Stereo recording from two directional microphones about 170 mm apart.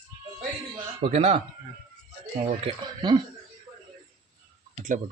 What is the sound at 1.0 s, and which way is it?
Speech, 35° right (ahead or behind).